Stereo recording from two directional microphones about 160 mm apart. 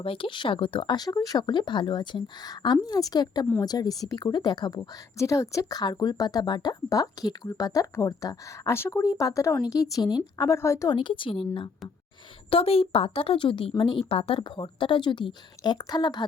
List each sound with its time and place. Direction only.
0.0 s speech: 35° left (ahead or behind); by 10.9 s 20° left (ahead or behind)
10.9 s speech: 30° left (ahead or behind)